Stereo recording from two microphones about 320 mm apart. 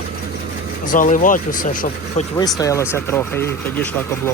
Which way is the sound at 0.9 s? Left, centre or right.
Left.